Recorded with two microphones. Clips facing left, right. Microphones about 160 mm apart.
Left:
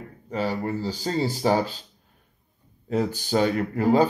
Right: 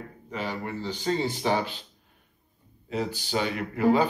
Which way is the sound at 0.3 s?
40° left (ahead or behind).